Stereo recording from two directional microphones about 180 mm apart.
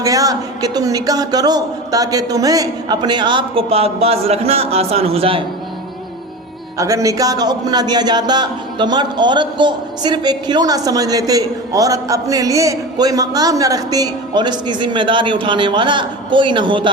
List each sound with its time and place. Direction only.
0.0 s a man's voice: 20° right (ahead or behind)
6.7 s a man's voice: 15° right (ahead or behind)